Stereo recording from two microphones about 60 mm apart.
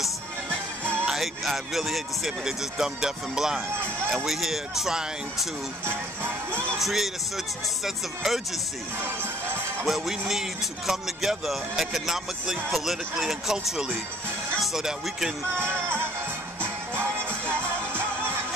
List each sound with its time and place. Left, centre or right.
1.0 s speech: centre
5.9 s music: right
6.8 s speech: centre
9.8 s speech: centre
15.5 s music: right